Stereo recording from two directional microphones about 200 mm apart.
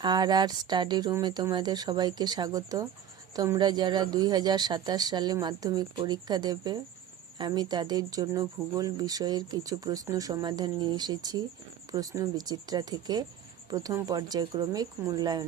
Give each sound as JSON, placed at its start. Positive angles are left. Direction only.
{"t": 0.0, "sound": "speech", "side_deg": -20}